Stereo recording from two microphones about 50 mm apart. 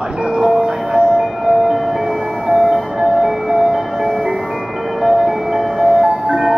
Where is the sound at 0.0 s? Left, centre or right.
Centre.